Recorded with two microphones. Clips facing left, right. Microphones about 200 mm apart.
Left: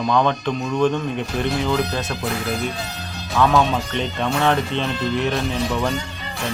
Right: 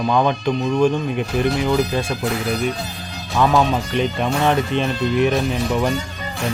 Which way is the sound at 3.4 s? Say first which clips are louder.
Right 1 dB; 15° right (ahead or behind).